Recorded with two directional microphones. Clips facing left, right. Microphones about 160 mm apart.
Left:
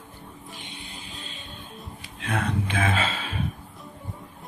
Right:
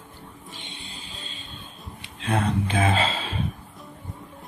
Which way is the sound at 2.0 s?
30° right (ahead or behind).